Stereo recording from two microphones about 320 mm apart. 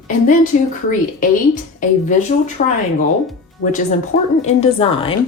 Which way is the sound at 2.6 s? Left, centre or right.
Left.